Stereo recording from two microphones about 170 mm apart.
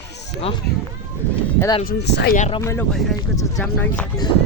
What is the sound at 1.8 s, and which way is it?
Speech, 75° left (ahead or behind).